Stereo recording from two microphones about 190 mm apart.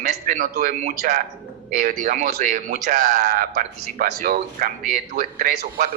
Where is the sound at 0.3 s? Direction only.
50° right (ahead or behind).